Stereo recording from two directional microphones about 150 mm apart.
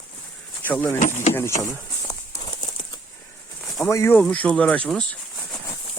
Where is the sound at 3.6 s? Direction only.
Centre (ahead or behind).